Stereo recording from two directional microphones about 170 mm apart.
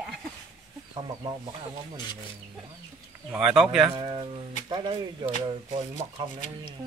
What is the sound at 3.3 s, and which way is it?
Speech, 5° right (ahead or behind).